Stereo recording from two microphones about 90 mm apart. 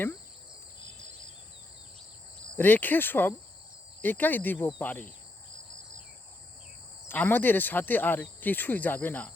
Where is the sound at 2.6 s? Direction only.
20° left (ahead or behind).